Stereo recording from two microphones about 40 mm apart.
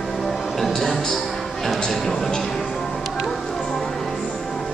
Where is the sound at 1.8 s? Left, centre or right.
Centre.